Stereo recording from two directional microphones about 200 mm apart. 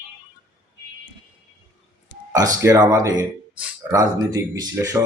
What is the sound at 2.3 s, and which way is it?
Speech, 15° right (ahead or behind).